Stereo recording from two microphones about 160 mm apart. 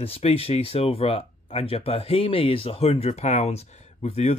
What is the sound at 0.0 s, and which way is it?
Speech, 35° left (ahead or behind).